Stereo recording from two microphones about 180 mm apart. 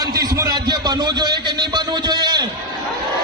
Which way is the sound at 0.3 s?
20° right (ahead or behind).